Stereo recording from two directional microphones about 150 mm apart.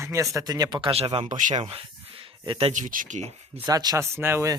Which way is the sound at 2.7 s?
60° right (ahead or behind).